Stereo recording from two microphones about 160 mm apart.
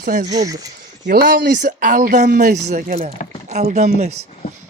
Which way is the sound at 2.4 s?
90° right.